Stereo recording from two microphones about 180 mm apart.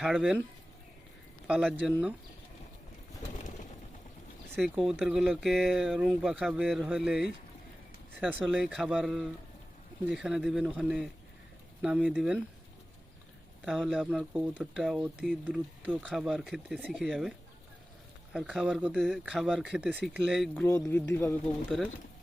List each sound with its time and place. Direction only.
0.0 s speech: 5° right (ahead or behind)
1.5 s speech: 5° right (ahead or behind)
4.8 s speech: centre (ahead or behind)
13.7 s speech: centre (ahead or behind)
18.3 s a man's voice: 5° right (ahead or behind)